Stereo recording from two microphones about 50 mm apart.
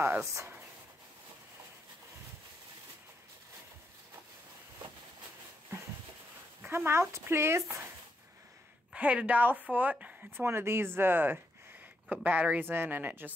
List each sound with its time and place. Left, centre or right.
0.2 s speech: right
6.6 s speech: right
8.9 s a woman's voice: right
10.3 s speech: right
12.1 s a woman's voice: right
12.5 s speech: right